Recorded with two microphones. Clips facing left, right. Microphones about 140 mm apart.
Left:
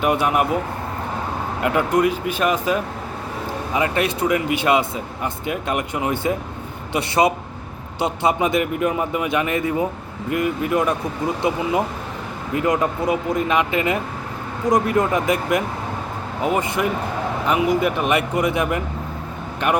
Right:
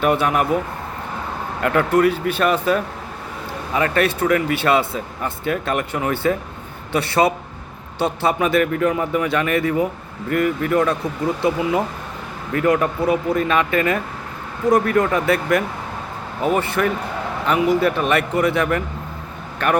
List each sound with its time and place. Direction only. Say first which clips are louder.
0.0 s speech: right 1 dB; 15° left (ahead or behind)
1.6 s speech: right 2 dB; 10° left (ahead or behind)